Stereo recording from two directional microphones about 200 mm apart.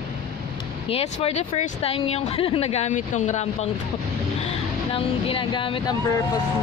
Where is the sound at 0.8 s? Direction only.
30° left (ahead or behind).